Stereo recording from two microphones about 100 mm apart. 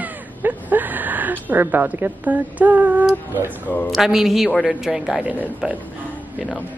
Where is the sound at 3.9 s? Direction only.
5° right (ahead or behind).